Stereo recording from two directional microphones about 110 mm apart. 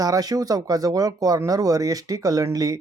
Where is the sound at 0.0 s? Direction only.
35° right (ahead or behind).